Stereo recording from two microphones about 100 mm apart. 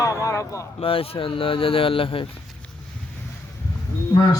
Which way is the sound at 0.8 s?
70° left (ahead or behind).